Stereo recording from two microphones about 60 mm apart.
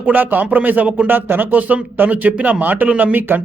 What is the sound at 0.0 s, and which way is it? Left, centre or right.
A man's voice, right.